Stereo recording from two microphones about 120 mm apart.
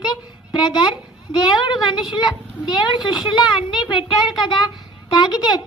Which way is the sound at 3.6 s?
40° left (ahead or behind).